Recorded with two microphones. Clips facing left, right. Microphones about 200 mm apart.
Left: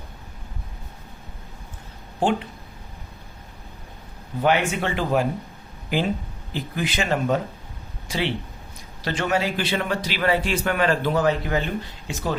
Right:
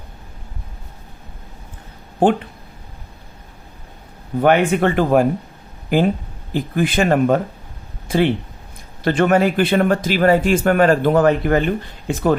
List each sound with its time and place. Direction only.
2.1 s speech: 55° right (ahead or behind)
4.4 s speech: 55° right (ahead or behind)